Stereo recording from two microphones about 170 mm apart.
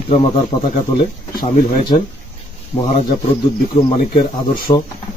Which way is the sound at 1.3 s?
55° left (ahead or behind).